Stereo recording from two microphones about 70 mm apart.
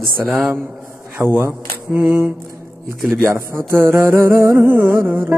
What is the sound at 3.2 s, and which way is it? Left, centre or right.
Music, right.